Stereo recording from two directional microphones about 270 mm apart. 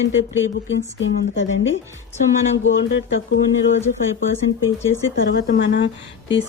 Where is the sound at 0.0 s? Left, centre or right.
Left.